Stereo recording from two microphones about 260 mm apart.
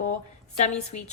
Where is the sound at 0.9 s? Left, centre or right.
Left.